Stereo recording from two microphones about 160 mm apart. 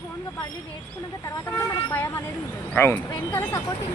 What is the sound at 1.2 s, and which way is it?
Speech, 15° left (ahead or behind).